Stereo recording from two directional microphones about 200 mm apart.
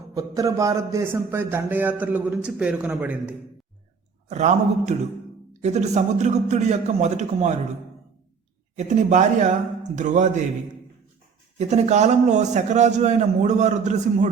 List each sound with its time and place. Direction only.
0.1 s a man's voice: 15° right (ahead or behind)
4.3 s a man's voice: 35° right (ahead or behind)
8.7 s a man's voice: 35° right (ahead or behind)
11.7 s a man's voice: 35° right (ahead or behind)